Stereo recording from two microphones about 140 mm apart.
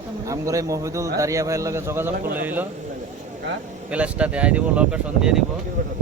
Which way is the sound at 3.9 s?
10° right (ahead or behind).